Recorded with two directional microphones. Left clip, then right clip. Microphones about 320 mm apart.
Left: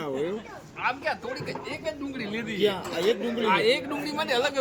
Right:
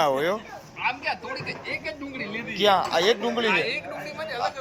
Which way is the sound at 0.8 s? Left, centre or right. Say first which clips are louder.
Right 1 dB; centre.